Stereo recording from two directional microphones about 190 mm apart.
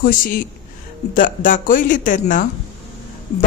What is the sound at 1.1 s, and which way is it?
Speech, 45° left (ahead or behind).